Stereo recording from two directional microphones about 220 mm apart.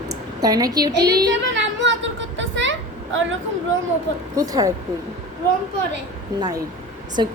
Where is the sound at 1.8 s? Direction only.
55° right (ahead or behind).